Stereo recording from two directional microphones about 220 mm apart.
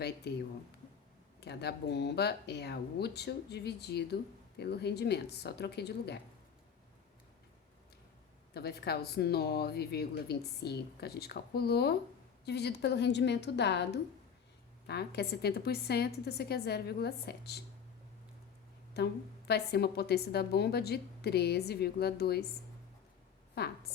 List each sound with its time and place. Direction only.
0.3 s speech: 50° left (ahead or behind)
8.5 s speech: 45° left (ahead or behind)
18.9 s speech: 50° left (ahead or behind)
23.6 s speech: 45° left (ahead or behind)